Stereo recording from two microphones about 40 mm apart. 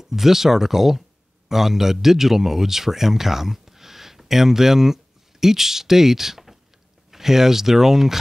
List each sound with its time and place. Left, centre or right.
0.0 s speech: centre